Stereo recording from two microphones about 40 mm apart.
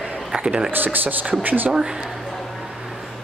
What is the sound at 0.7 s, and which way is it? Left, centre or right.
Speech, right.